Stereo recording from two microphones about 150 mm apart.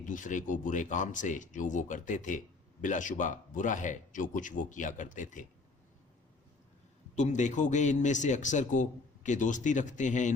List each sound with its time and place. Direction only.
0.0 s a man's voice: 60° left (ahead or behind)
7.2 s a man's voice: 55° left (ahead or behind)